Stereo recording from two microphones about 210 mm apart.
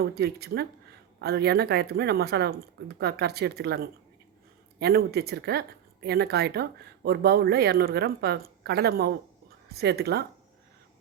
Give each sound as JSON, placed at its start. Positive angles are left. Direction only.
{"t": 0.0, "sound": "speech", "side_deg": -45}